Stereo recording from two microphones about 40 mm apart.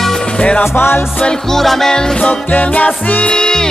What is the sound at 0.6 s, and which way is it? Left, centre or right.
Music, left.